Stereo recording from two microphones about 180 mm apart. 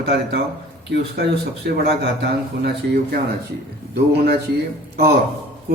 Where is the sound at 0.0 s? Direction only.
65° right (ahead or behind).